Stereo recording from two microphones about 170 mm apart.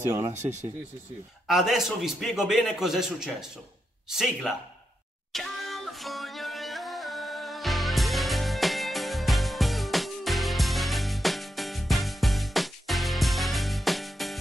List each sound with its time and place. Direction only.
1.5 s a man's voice: centre (ahead or behind)
5.3 s music: centre (ahead or behind)